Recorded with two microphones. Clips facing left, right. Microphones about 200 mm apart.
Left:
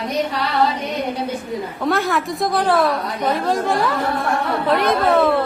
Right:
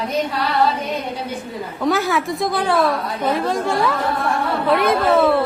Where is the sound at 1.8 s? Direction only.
Centre (ahead or behind).